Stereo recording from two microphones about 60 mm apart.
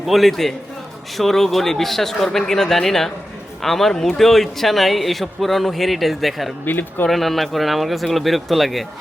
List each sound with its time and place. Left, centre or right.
0.0 s a man's voice: centre
6.7 s speech: left
7.1 s a man's voice: centre